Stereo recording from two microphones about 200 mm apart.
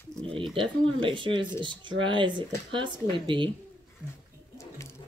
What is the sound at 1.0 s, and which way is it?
Speech, 25° right (ahead or behind).